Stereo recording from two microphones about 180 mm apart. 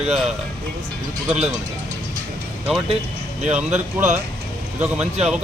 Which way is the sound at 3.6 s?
40° right (ahead or behind).